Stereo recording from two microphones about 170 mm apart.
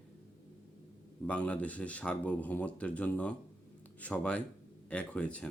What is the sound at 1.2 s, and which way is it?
Speech, 5° left (ahead or behind).